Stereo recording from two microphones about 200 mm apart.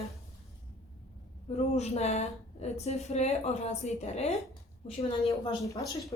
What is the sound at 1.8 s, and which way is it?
A woman's voice, 35° left (ahead or behind).